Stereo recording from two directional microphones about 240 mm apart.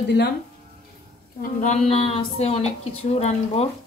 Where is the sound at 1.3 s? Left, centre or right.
Left.